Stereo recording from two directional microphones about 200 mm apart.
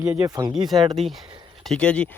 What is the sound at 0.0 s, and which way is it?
Speech, 10° right (ahead or behind).